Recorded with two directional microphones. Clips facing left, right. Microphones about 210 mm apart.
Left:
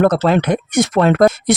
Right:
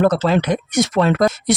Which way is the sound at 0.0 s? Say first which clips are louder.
Left 2 dB; 55° left (ahead or behind).